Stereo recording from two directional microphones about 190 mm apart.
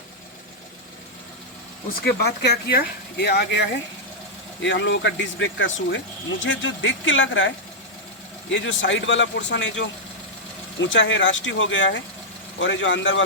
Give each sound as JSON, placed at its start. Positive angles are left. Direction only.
{"t": 2.0, "sound": "speech", "side_deg": 60}